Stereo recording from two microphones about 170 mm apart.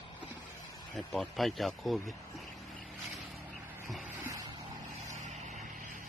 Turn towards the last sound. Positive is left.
turn(degrees=-45)  # may be behind; listen again after turning